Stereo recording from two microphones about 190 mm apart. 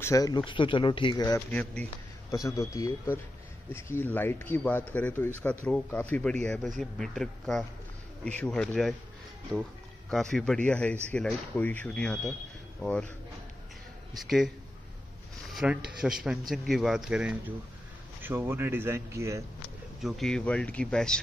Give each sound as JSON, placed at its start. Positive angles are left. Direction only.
{"t": 0.0, "sound": "speech", "side_deg": 15}
{"t": 1.5, "sound": "speech", "side_deg": 5}
{"t": 14.1, "sound": "speech", "side_deg": 0}
{"t": 15.5, "sound": "speech", "side_deg": -5}
{"t": 20.0, "sound": "speech", "side_deg": 0}